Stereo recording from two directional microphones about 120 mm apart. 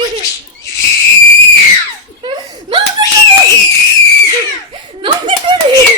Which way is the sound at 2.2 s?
40° right (ahead or behind).